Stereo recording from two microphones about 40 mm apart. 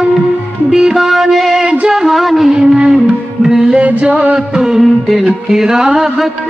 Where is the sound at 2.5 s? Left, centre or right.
Centre.